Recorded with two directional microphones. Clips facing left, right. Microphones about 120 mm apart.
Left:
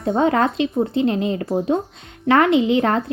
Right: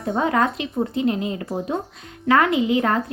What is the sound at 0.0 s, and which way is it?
A woman's voice, 25° left (ahead or behind).